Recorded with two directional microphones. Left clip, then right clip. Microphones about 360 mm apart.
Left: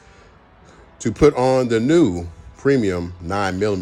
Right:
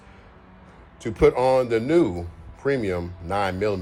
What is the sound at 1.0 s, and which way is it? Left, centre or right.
Speech, left.